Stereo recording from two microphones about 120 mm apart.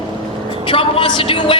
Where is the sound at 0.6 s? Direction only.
45° left (ahead or behind).